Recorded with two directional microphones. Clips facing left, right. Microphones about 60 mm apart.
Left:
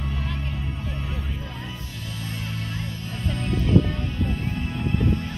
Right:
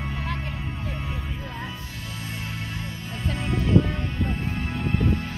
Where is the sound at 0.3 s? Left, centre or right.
Right.